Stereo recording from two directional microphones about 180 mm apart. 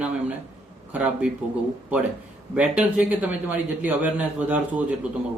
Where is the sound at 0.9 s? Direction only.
10° right (ahead or behind).